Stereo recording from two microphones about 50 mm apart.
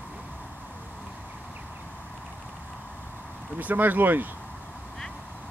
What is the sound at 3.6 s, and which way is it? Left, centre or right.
Speech, right.